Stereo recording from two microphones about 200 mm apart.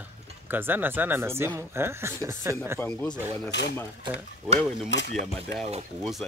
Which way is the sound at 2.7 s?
5° left (ahead or behind).